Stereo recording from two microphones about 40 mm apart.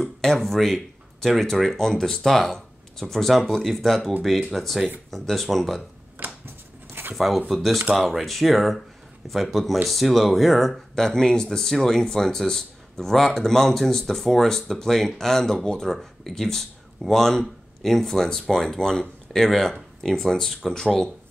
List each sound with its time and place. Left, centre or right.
0.2 s speech: centre
6.4 s dog: right
7.2 s speech: centre